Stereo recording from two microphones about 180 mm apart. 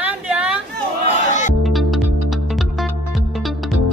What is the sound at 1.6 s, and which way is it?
Music, centre (ahead or behind).